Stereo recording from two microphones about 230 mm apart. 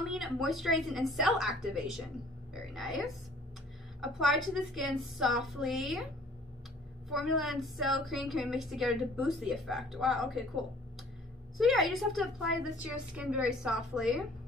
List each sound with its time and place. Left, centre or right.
0.1 s a woman's voice: centre
7.1 s a woman's voice: centre